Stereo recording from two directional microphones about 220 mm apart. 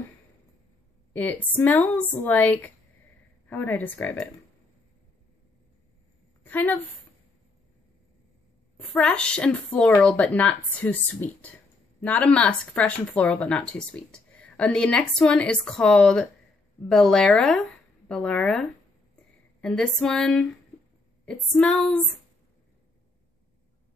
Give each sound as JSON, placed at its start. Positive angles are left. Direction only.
{"t": 1.1, "sound": "a woman's voice", "side_deg": 10}
{"t": 6.4, "sound": "a woman's voice", "side_deg": 5}
{"t": 8.9, "sound": "speech", "side_deg": 5}